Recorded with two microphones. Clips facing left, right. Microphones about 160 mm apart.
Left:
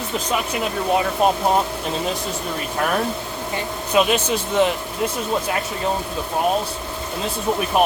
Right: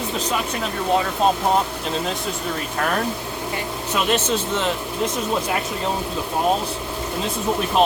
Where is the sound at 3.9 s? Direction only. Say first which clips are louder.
Left 3 dB; 10° left (ahead or behind).